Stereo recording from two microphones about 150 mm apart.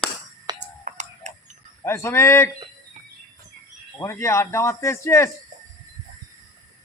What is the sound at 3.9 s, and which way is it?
Speech, 20° left (ahead or behind).